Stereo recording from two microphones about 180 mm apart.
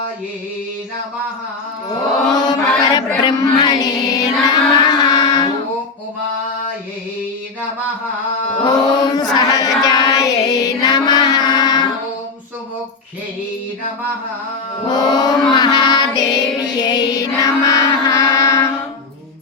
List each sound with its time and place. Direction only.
2.3 s music: 20° left (ahead or behind)
8.6 s music: 20° left (ahead or behind)
9.3 s chant: 20° left (ahead or behind)
14.8 s child singing: 20° left (ahead or behind)